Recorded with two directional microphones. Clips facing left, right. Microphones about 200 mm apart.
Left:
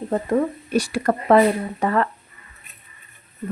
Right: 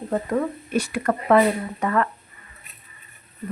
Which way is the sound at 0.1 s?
30° left (ahead or behind).